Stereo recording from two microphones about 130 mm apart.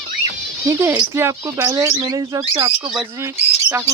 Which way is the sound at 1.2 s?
20° right (ahead or behind).